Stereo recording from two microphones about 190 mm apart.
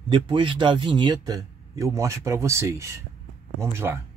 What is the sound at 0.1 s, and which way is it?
Speech, 25° right (ahead or behind).